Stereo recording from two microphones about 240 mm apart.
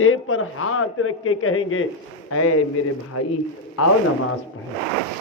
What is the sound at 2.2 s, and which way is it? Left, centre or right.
A man's voice, left.